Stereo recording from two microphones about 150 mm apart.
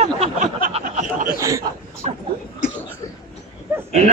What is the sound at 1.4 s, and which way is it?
Speech, 20° right (ahead or behind).